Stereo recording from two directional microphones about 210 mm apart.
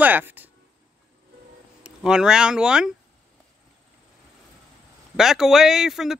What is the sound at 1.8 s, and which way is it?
Speech, 5° right (ahead or behind).